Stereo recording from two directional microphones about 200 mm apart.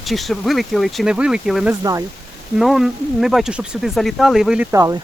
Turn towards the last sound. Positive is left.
turn(degrees=-20)  # may be behind; listen again after turning